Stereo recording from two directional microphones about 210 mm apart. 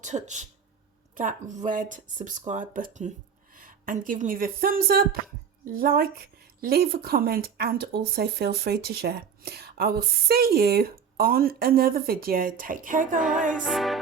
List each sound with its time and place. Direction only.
0.0 s a woman's voice: 35° right (ahead or behind)
13.5 s music: centre (ahead or behind)